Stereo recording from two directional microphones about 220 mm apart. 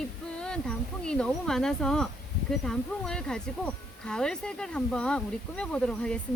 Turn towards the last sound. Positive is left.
turn(degrees=5)  # may be behind; listen again after turning